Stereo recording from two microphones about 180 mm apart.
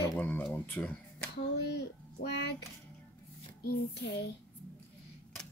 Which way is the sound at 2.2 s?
65° left (ahead or behind).